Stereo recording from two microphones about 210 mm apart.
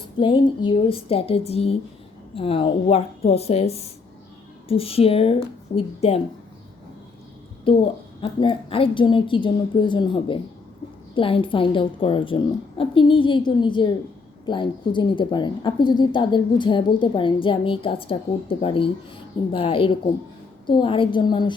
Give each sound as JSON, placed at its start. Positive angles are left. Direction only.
{"t": 0.2, "sound": "a woman's voice", "side_deg": 25}
{"t": 7.6, "sound": "a woman's voice", "side_deg": 25}